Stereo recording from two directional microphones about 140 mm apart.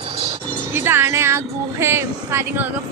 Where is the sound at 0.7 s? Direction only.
15° right (ahead or behind).